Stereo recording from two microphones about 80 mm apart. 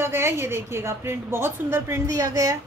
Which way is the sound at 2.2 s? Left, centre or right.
Right.